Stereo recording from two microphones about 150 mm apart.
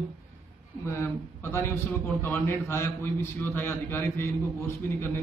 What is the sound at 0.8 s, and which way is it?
A man's voice, 15° left (ahead or behind).